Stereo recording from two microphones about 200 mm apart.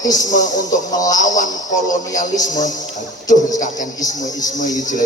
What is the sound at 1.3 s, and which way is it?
Speech, 40° left (ahead or behind).